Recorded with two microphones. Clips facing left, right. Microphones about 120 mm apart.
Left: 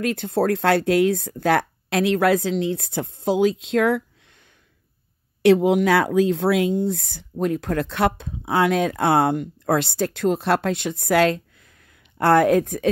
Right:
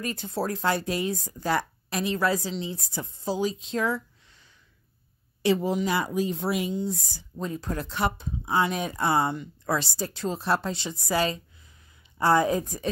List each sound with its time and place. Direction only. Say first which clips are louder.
0.0 s speech: left 9 dB; 65° left (ahead or behind); by 6.7 s 85° left
6.7 s speech: left 7 dB; 60° left (ahead or behind)